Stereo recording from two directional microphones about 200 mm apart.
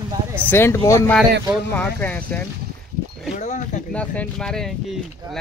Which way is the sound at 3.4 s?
35° left (ahead or behind).